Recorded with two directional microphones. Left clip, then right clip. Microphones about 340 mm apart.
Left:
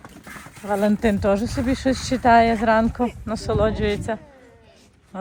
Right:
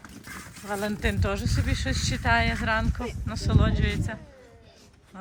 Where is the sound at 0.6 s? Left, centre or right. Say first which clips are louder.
Left 9 dB; centre.